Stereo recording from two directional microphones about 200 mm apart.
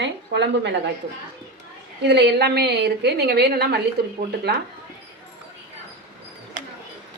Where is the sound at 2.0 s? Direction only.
60° right (ahead or behind).